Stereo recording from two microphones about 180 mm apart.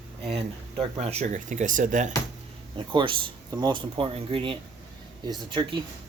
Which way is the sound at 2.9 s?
25° right (ahead or behind).